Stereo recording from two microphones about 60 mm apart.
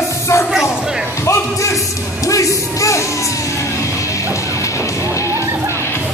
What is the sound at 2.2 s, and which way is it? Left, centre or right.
Speech, left.